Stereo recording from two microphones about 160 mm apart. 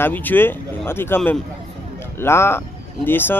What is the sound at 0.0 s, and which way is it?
Speech, 10° left (ahead or behind).